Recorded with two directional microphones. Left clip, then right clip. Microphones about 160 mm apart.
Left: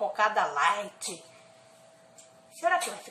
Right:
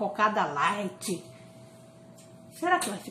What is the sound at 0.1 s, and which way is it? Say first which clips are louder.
Speech: even; 10° left (ahead or behind).